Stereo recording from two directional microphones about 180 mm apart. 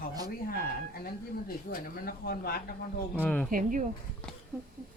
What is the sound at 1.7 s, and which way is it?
Speech, 55° left (ahead or behind).